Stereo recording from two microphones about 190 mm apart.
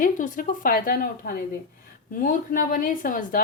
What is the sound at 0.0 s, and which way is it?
A woman's voice, 45° left (ahead or behind).